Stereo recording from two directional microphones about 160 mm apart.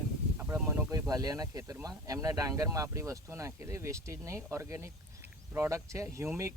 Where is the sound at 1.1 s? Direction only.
25° right (ahead or behind).